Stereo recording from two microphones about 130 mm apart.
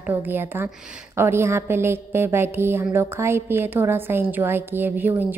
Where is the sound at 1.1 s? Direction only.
20° right (ahead or behind).